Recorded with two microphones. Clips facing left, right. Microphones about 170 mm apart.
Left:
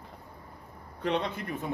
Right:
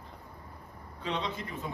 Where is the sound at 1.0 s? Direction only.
60° left (ahead or behind).